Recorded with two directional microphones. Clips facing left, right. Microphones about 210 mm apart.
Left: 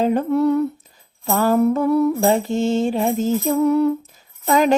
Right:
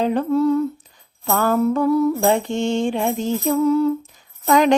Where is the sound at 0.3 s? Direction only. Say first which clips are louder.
Right 1 dB; 65° left (ahead or behind).